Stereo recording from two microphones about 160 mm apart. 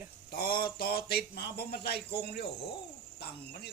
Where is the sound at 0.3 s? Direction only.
70° left (ahead or behind).